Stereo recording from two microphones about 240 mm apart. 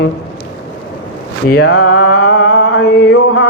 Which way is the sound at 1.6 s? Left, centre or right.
Left.